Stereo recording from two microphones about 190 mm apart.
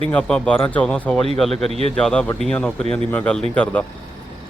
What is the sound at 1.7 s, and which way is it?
Speech, 30° right (ahead or behind).